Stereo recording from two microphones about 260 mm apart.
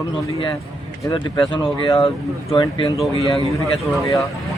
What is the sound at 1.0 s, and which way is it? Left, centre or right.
Speech, centre.